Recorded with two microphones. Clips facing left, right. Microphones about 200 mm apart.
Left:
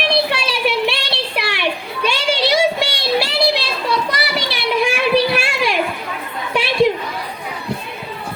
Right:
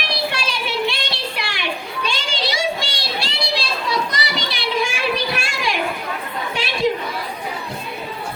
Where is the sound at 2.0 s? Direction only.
65° left (ahead or behind).